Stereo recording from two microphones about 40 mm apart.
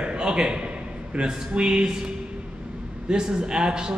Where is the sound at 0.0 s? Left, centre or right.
Right.